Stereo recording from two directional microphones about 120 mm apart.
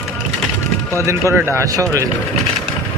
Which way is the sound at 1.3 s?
20° right (ahead or behind).